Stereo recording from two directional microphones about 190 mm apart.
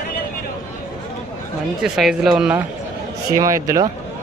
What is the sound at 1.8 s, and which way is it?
Speech, centre (ahead or behind).